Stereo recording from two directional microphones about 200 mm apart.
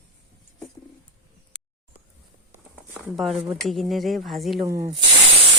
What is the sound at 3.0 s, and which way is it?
Speech, centre (ahead or behind).